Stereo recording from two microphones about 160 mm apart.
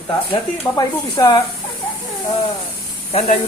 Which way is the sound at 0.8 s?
30° left (ahead or behind).